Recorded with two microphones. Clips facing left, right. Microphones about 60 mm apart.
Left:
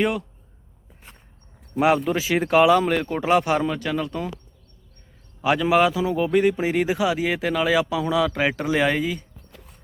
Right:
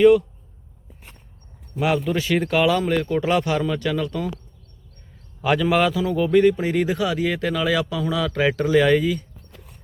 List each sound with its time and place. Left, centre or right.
0.0 s a man's voice: centre
1.8 s speech: left
2.1 s a man's voice: centre
2.9 s speech: left
3.7 s a man's voice: centre
5.4 s a man's voice: centre